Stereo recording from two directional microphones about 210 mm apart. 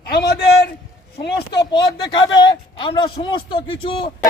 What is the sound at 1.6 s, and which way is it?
A man's voice, 20° left (ahead or behind).